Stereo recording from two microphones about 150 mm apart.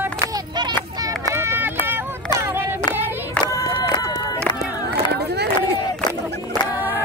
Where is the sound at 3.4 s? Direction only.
25° left (ahead or behind).